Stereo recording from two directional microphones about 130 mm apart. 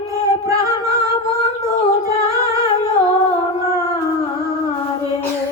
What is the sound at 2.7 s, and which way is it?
Humming, 40° left (ahead or behind).